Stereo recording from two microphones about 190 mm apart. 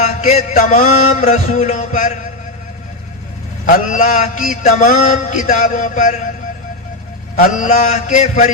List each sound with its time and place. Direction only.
0.0 s a man's voice: 35° left (ahead or behind)
3.7 s a man's voice: 45° left (ahead or behind)
7.6 s a man's voice: 45° left (ahead or behind)